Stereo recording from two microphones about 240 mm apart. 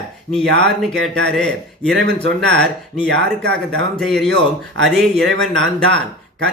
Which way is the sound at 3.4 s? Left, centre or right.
Right.